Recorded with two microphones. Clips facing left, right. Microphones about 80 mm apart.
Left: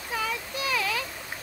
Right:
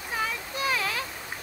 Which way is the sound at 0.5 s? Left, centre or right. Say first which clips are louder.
Right 2 dB; right.